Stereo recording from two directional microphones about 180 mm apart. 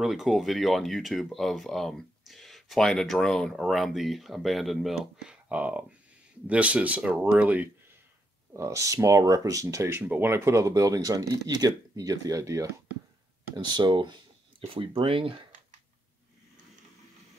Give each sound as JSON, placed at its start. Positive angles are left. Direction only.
{"t": 0.0, "sound": "speech", "side_deg": 0}